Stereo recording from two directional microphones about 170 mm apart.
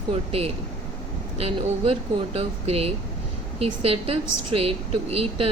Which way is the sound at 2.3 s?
35° right (ahead or behind).